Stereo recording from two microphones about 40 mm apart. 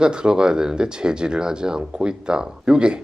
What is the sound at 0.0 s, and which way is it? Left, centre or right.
Speech, right.